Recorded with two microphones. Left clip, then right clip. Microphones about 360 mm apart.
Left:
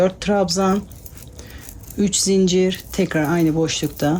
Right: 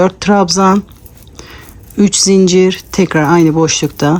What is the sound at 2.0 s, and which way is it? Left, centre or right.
Speech, centre.